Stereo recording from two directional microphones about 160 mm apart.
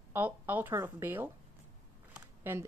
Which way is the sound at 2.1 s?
15° right (ahead or behind).